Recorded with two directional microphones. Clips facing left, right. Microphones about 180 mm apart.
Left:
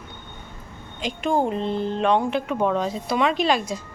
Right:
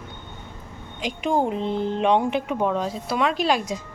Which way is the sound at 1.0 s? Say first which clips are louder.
Even; 15° right (ahead or behind).